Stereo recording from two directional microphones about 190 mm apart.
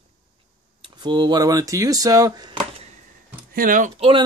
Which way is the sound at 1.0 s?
20° right (ahead or behind).